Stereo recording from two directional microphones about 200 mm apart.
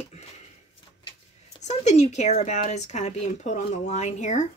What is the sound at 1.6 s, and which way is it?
Speech, 35° left (ahead or behind).